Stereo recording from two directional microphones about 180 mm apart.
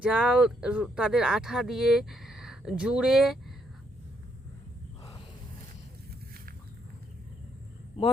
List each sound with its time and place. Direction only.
0.0 s speech: 5° right (ahead or behind)